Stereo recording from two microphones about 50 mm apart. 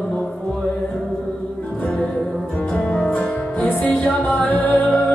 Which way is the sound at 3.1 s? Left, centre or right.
Left.